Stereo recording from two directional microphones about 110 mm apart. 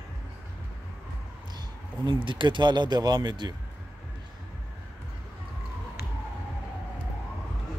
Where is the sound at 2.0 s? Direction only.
50° right (ahead or behind).